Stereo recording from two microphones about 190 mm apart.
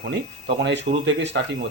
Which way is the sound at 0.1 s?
65° right (ahead or behind).